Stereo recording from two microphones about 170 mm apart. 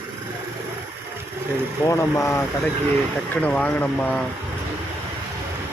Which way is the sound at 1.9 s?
15° left (ahead or behind).